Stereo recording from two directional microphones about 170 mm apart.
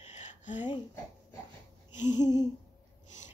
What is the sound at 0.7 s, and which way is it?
Speech, 25° left (ahead or behind).